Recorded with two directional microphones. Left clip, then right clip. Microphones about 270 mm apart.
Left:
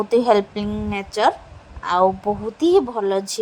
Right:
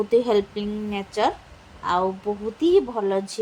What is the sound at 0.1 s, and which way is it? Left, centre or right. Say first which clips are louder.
Speech: left 5 dB; centre.